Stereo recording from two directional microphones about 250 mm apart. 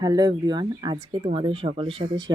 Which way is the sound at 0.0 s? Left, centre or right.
Centre.